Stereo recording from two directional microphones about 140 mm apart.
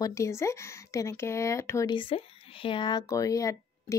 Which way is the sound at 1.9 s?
40° left (ahead or behind).